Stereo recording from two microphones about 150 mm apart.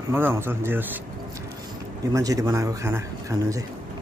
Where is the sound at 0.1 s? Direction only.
15° right (ahead or behind).